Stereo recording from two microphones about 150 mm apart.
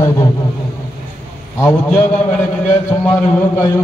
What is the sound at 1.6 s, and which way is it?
A man's voice, 15° left (ahead or behind).